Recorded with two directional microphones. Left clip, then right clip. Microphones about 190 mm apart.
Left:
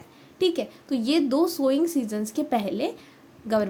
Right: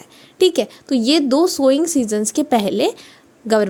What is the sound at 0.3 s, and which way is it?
A woman's voice, 45° right (ahead or behind).